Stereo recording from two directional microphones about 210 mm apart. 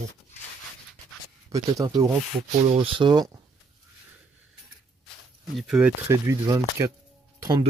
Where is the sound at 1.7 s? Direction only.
15° right (ahead or behind).